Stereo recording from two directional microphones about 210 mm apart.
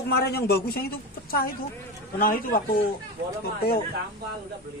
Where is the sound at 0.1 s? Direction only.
50° left (ahead or behind).